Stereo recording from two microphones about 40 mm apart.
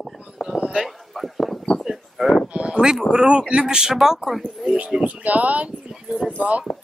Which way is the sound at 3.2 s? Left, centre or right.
Right.